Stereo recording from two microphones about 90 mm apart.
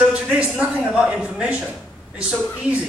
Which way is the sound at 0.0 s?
15° right (ahead or behind).